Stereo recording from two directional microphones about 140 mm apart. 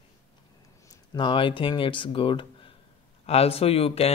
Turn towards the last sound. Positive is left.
turn(degrees=45)  # may be behind; listen again after turning